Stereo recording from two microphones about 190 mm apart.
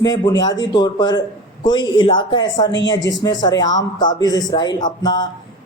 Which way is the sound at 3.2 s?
20° left (ahead or behind).